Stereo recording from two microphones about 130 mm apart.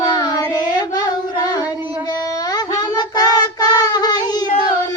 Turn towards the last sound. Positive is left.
turn(degrees=30)  # may be behind; listen again after turning